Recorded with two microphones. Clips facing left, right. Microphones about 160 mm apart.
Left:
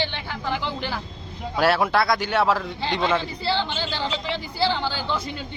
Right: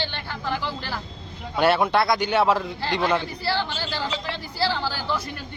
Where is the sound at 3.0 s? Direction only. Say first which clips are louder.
Even; 20° left (ahead or behind).